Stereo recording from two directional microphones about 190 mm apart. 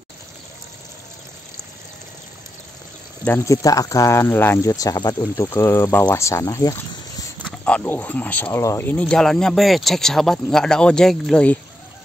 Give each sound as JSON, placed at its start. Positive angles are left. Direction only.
{"t": 3.3, "sound": "speech", "side_deg": 15}
{"t": 7.4, "sound": "speech", "side_deg": 5}